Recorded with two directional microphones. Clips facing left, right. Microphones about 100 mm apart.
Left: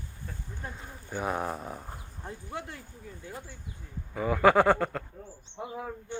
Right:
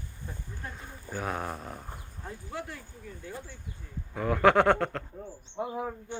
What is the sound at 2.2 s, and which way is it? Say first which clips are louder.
Speech: even; 20° left (ahead or behind).